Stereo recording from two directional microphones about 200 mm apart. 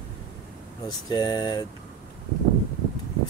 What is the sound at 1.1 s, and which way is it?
Speech, 20° left (ahead or behind).